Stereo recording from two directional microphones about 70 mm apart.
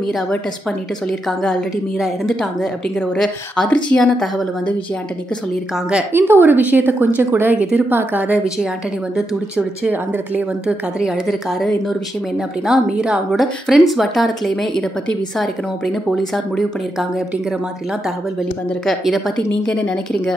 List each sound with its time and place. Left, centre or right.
2.0 s a woman's voice: centre
3.6 s a woman's voice: centre
6.1 s a woman's voice: right
9.6 s a woman's voice: right
12.6 s a woman's voice: centre
18.9 s speech: centre
19.6 s speech: centre